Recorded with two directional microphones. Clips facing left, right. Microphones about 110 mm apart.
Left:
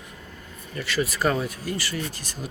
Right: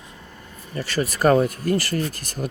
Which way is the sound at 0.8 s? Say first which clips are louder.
Right 3 dB; 40° right (ahead or behind).